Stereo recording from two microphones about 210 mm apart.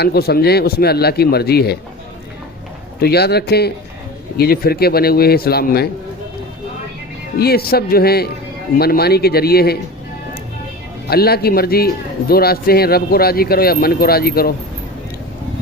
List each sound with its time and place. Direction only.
0.0 s speech: 50° left (ahead or behind)
3.0 s speech: 50° left (ahead or behind)
7.3 s speech: 45° left (ahead or behind)
11.1 s speech: 50° left (ahead or behind)